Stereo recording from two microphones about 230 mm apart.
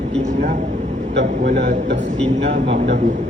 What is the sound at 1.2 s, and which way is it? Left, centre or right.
Speech, right.